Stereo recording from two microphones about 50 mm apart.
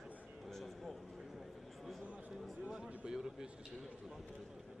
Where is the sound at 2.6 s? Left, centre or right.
Centre.